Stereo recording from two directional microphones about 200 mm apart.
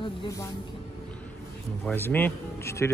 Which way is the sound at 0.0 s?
25° left (ahead or behind).